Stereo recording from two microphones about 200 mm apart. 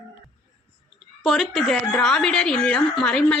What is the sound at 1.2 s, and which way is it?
A woman's voice, centre (ahead or behind).